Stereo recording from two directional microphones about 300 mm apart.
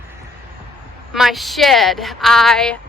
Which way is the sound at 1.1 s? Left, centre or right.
Centre.